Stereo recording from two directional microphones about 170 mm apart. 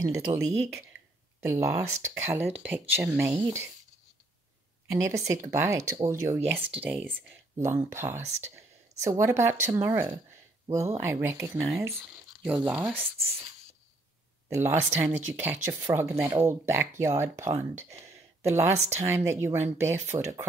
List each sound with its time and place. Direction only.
0.0 s speech: 20° right (ahead or behind)
4.9 s speech: 20° right (ahead or behind)
14.5 s speech: 15° right (ahead or behind)
18.0 s a sound: 15° right (ahead or behind)
18.9 s speech: 15° right (ahead or behind)